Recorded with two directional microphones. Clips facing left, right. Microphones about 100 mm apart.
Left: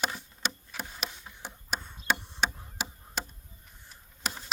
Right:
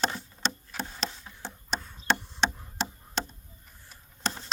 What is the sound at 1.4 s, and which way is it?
Chop, 10° left (ahead or behind).